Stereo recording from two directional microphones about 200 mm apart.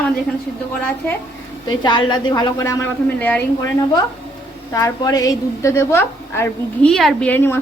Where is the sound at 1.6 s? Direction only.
20° left (ahead or behind).